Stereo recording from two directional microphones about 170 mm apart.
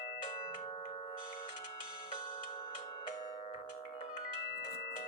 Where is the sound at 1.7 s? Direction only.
25° left (ahead or behind).